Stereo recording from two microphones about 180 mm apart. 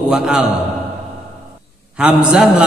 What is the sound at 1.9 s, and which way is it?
Speech, 5° right (ahead or behind).